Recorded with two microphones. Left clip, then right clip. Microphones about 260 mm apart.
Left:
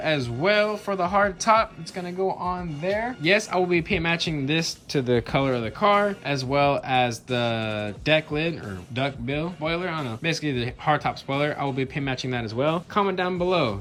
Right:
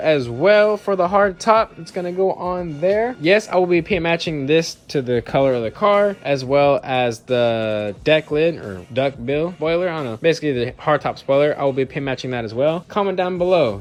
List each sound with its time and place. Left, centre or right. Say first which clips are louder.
0.1 s speech: right 8 dB; centre
2.9 s speech: right 5 dB; centre